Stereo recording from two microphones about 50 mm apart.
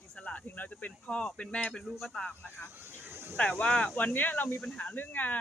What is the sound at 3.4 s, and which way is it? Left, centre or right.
Speech, centre.